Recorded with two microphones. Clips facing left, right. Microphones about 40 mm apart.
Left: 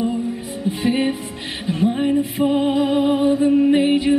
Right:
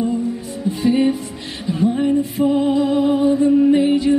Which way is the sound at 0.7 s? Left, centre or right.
Left.